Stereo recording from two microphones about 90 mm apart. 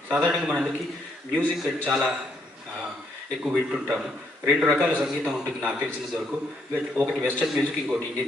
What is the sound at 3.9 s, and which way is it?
A man's voice, 20° right (ahead or behind).